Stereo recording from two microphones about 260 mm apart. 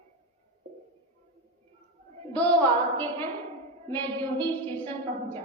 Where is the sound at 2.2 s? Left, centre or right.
Centre.